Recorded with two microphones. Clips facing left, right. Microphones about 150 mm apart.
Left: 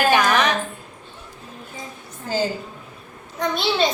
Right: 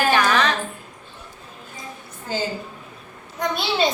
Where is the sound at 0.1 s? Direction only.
15° left (ahead or behind).